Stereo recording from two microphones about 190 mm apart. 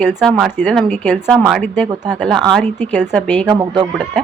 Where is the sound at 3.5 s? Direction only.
20° right (ahead or behind).